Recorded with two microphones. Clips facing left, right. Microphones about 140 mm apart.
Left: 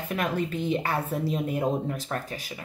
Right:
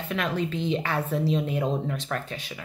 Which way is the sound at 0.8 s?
40° left (ahead or behind).